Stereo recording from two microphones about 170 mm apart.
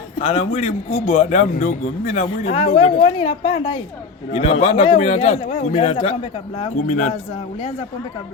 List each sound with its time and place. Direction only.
0.2 s a man's voice: 40° left (ahead or behind)